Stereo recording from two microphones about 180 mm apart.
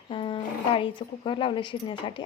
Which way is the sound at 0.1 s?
30° left (ahead or behind).